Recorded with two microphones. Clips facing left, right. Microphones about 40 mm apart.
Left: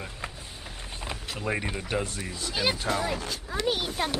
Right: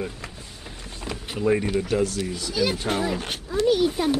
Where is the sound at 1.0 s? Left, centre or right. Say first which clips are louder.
Right 4 dB; centre.